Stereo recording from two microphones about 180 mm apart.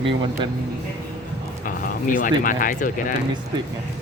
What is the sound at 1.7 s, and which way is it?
Speech, 50° left (ahead or behind).